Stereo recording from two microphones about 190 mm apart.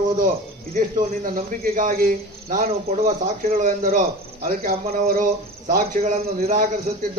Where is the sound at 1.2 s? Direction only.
45° right (ahead or behind).